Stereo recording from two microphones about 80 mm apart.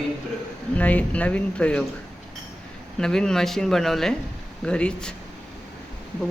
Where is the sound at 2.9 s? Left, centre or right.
Centre.